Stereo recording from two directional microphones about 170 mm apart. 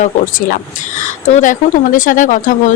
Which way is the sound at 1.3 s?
45° left (ahead or behind).